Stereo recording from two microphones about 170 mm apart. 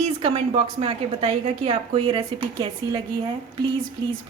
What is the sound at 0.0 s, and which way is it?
A woman's voice, 35° right (ahead or behind).